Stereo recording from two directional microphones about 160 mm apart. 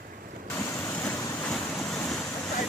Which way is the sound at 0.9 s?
10° left (ahead or behind).